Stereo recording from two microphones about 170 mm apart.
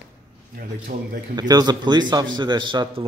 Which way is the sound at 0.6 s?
60° right (ahead or behind).